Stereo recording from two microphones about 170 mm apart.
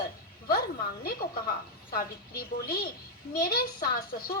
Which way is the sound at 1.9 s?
60° left (ahead or behind).